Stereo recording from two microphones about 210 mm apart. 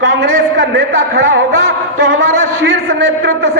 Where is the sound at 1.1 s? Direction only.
60° right (ahead or behind).